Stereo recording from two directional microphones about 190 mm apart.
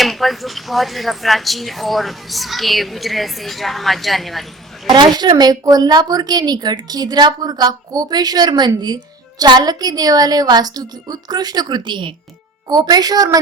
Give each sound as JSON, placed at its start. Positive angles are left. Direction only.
{"t": 0.0, "sound": "speech", "side_deg": 0}
{"t": 4.9, "sound": "a woman's voice", "side_deg": -25}